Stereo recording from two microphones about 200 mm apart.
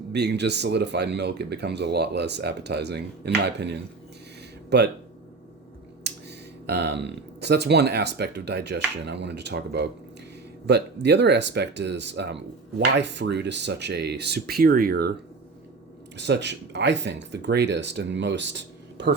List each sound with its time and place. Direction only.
0.1 s speech: 55° right (ahead or behind)
6.0 s speech: 55° right (ahead or behind)
16.1 s speech: 60° right (ahead or behind)